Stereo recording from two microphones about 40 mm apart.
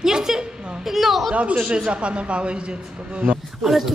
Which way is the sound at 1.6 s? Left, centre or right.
Right.